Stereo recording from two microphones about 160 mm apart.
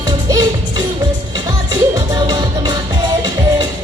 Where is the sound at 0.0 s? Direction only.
25° right (ahead or behind).